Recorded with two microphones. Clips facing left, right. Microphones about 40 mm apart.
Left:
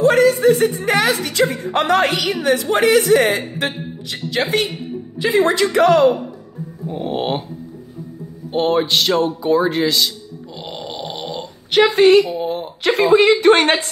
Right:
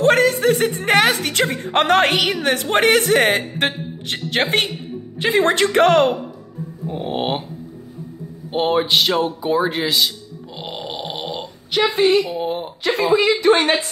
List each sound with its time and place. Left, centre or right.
0.0 s a sound: right
1.2 s a woman's voice: right
6.9 s speech: centre
8.5 s a sound: centre
12.3 s speech: centre
12.8 s speech: left